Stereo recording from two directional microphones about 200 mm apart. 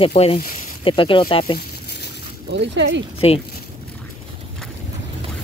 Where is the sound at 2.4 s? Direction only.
60° right (ahead or behind).